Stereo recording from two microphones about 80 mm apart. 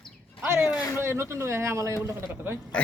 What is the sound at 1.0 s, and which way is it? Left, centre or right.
A man's voice, right.